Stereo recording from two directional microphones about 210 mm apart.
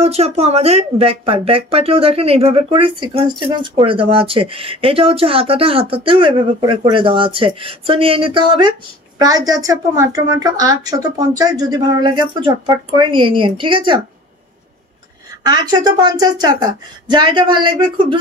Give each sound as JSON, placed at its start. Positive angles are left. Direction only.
{"t": 0.0, "sound": "a woman's voice", "side_deg": -30}
{"t": 15.4, "sound": "speech", "side_deg": -20}